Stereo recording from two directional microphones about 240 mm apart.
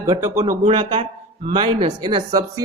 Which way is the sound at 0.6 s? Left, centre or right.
Right.